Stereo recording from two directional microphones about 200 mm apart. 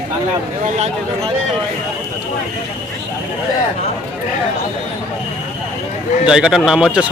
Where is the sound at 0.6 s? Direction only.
35° right (ahead or behind).